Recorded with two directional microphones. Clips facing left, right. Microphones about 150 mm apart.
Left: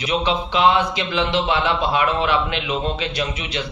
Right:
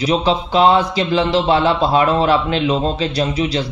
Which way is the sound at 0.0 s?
35° right (ahead or behind).